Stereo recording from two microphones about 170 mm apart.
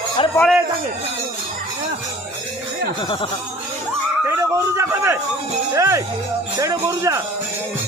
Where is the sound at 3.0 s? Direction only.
30° left (ahead or behind).